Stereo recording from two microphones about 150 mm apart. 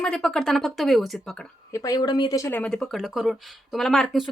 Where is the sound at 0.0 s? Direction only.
5° left (ahead or behind).